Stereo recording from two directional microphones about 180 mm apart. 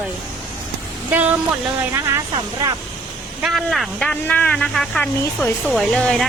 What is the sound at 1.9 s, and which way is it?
Speech, 15° right (ahead or behind).